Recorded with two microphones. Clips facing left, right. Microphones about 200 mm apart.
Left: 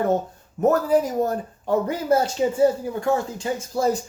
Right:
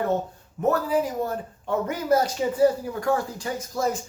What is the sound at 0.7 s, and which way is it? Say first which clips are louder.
Speech: left 3 dB; 45° left (ahead or behind).